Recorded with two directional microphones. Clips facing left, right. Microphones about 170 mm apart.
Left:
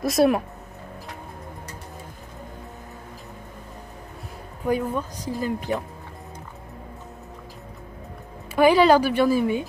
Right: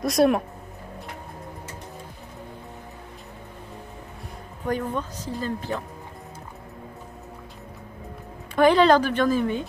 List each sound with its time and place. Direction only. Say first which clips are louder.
0.0 s speech: even; centre (ahead or behind)
4.6 s speech: left 3 dB; 10° left (ahead or behind)
8.5 s speech: left 1 dB; 10° left (ahead or behind)